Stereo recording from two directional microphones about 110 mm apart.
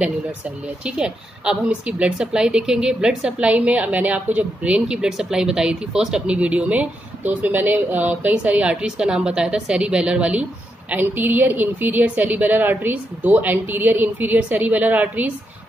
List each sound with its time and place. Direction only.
0.8 s a woman's voice: 5° right (ahead or behind)